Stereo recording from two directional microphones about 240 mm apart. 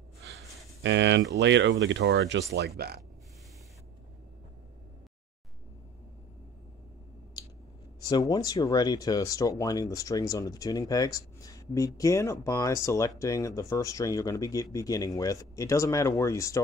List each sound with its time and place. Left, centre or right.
0.3 s a sound: right
0.8 s speech: right
8.0 s speech: centre